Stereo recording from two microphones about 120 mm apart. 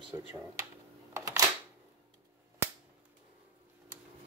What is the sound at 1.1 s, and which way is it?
Camera, 30° right (ahead or behind).